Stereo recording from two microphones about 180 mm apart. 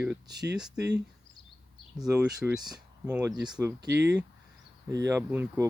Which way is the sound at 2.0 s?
5° right (ahead or behind).